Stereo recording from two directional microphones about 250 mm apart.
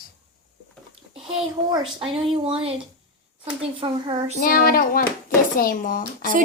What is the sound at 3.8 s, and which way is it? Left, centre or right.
Speech, centre.